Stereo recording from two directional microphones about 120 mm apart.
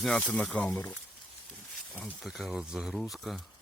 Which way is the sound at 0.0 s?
5° left (ahead or behind).